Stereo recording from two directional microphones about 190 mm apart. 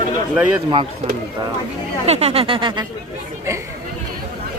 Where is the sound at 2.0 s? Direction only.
35° right (ahead or behind).